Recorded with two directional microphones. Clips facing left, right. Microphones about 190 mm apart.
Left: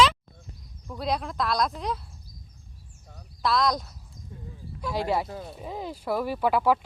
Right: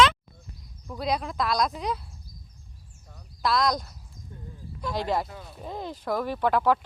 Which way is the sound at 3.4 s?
Centre (ahead or behind).